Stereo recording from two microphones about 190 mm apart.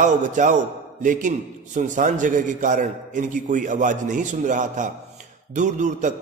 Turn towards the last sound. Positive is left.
turn(degrees=-40)  # may be behind; listen again after turning